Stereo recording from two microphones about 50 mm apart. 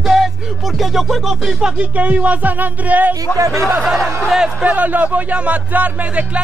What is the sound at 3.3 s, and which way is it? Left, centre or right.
Speech, left.